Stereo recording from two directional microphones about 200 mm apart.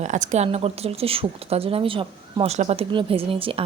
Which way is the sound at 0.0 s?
35° right (ahead or behind).